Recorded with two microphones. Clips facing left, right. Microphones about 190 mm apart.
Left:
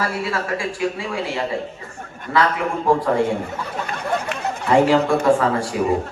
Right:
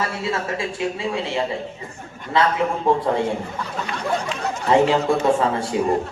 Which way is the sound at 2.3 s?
25° right (ahead or behind).